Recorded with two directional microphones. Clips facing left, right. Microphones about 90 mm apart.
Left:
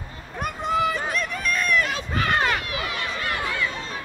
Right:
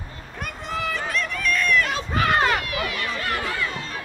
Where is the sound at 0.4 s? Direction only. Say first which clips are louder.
Left 6 dB; 20° left (ahead or behind).